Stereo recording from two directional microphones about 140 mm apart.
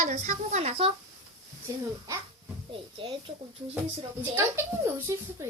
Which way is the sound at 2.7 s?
40° right (ahead or behind).